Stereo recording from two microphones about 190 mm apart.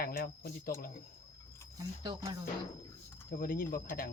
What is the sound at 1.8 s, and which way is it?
Speech, 20° right (ahead or behind).